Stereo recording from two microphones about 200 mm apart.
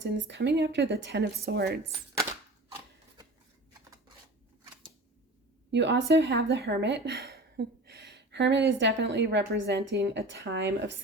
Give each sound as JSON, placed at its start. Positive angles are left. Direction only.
{"t": 0.0, "sound": "a woman's voice", "side_deg": -60}
{"t": 5.7, "sound": "a woman's voice", "side_deg": -60}